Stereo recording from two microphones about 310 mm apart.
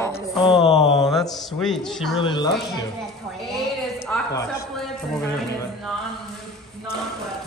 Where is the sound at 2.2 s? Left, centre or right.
Centre.